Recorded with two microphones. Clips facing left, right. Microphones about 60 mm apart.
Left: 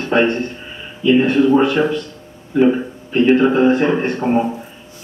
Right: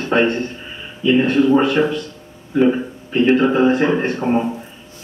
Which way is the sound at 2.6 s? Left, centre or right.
Centre.